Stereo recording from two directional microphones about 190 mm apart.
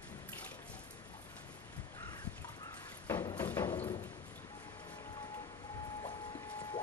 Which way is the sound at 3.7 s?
30° left (ahead or behind).